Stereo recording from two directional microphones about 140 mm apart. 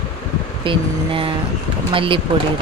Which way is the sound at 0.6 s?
40° right (ahead or behind).